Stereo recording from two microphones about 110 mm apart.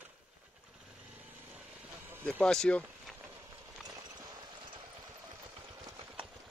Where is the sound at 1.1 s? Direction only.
15° right (ahead or behind).